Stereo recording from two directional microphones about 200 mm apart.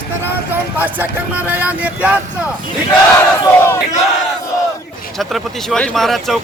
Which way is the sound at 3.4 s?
15° left (ahead or behind).